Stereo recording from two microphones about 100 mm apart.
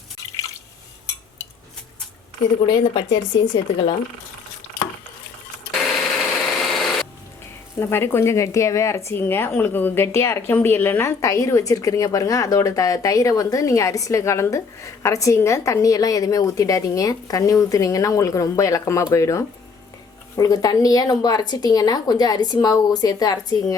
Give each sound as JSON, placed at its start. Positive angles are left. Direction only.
{"t": 2.6, "sound": "speech", "side_deg": 50}
{"t": 6.5, "sound": "a sound", "side_deg": 0}
{"t": 7.8, "sound": "speech", "side_deg": 25}